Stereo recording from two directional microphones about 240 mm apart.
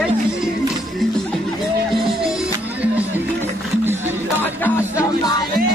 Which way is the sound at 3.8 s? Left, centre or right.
Centre.